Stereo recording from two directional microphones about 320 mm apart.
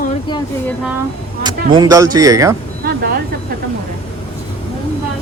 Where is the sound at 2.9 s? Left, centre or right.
Right.